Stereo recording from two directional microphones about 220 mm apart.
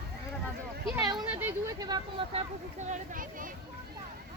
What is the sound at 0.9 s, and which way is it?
Speech, 15° right (ahead or behind).